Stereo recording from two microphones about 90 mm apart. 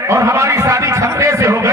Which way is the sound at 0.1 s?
35° right (ahead or behind).